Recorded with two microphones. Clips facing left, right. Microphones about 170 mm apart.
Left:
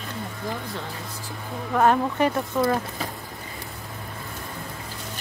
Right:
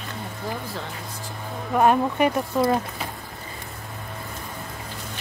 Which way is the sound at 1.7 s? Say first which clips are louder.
Right 1 dB; 15° right (ahead or behind).